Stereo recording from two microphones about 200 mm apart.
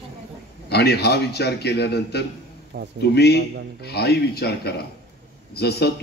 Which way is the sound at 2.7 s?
55° right (ahead or behind).